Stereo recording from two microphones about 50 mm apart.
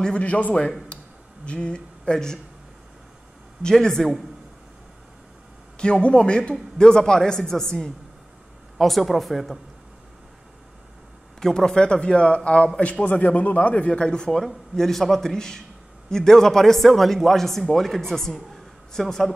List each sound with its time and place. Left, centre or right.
0.2 s speech: left; by 2.4 s centre
3.6 s speech: centre
5.8 s speech: centre
11.3 s speech: centre
14.4 s speech: centre